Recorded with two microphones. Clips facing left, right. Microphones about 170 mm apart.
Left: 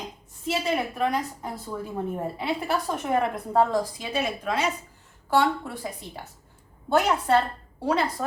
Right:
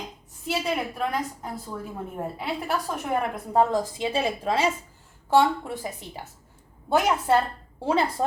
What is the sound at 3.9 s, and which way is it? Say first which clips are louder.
A woman's voice: right 3 dB; 25° right (ahead or behind).